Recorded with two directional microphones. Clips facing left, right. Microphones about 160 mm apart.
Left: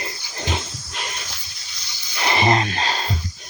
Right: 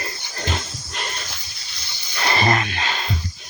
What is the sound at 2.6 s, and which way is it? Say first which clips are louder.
Music: left 2 dB; 35° left (ahead or behind).